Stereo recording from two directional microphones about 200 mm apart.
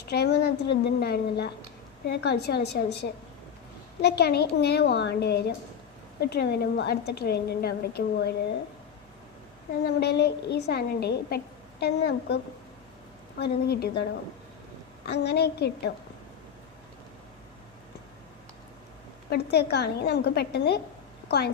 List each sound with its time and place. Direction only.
0.0 s a woman's voice: 55° left (ahead or behind)
9.8 s a woman's voice: 55° left (ahead or behind)
13.4 s a woman's voice: 55° left (ahead or behind)
19.3 s a woman's voice: 55° left (ahead or behind)